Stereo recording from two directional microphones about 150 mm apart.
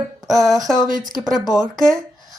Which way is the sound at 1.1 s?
Centre (ahead or behind).